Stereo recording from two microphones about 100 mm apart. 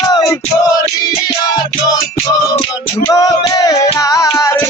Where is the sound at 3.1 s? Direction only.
35° left (ahead or behind).